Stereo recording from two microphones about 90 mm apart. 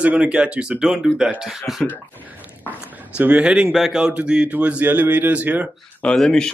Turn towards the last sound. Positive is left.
turn(degrees=10)  # may be behind; listen again after turning